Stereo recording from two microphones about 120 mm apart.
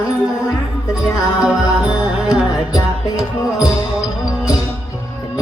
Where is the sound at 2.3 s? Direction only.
30° left (ahead or behind).